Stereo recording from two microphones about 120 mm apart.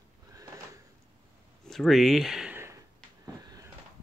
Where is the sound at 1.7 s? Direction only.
Centre (ahead or behind).